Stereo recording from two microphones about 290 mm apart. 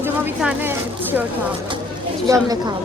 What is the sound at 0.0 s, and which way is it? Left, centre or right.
A woman's voice, centre.